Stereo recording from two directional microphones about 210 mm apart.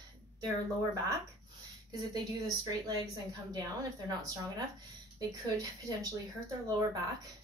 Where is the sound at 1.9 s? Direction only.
20° right (ahead or behind).